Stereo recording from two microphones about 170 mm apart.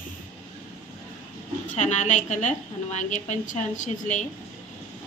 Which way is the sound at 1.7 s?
45° left (ahead or behind).